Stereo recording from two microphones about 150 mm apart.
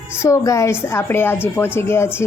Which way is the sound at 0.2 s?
20° left (ahead or behind).